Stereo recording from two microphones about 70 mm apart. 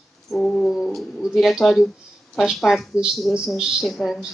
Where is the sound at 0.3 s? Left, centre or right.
Centre.